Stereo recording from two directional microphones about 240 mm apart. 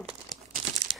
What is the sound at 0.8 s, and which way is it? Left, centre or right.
Crumpling, right.